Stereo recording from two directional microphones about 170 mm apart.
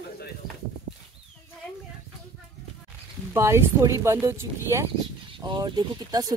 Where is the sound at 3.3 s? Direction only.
15° right (ahead or behind).